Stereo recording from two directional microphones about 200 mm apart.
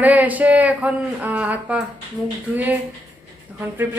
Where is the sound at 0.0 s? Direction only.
10° right (ahead or behind).